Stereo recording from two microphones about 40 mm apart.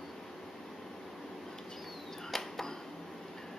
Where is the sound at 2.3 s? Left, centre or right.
Centre.